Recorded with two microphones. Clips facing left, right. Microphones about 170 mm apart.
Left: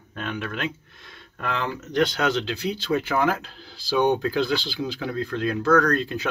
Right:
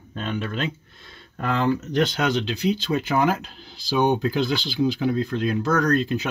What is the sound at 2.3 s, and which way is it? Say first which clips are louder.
Speech: right 3 dB; 20° right (ahead or behind).